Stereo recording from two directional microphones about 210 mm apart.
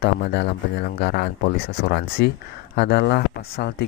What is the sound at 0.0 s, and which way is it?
Speech, 50° left (ahead or behind).